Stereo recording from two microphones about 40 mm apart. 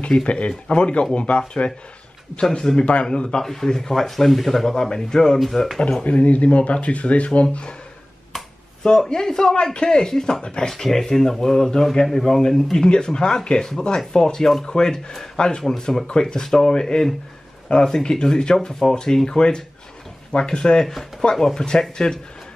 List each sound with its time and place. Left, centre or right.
0.2 s speech: left
2.5 s speech: centre
2.8 s speech: left
3.3 s speech: centre
4.7 s speech: centre
5.4 s speech: centre
5.8 s speech: centre
6.0 s speech: left
9.0 s speech: centre
10.7 s speech: centre
12.7 s speech: left
21.4 s speech: centre